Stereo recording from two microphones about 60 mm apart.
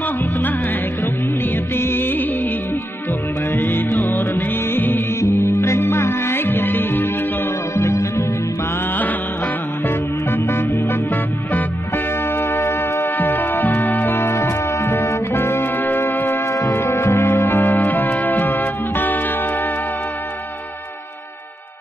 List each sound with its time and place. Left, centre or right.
1.8 s music: left
3.5 s music: left
5.2 s music: left
7.7 s music: left
9.8 s music: left